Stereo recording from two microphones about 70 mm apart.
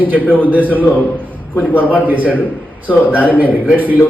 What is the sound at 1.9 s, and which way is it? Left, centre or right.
Speech, right.